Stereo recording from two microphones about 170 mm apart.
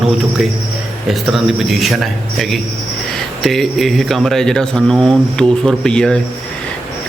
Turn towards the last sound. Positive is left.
turn(degrees=5)  # may be behind; listen again after turning